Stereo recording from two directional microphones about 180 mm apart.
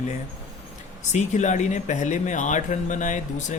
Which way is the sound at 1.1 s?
40° left (ahead or behind).